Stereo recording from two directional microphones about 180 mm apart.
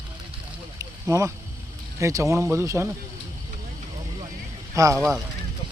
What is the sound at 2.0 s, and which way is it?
Speech, 15° right (ahead or behind).